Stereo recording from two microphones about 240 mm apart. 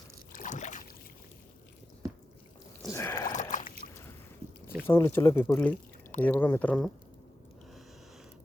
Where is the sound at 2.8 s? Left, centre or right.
Centre.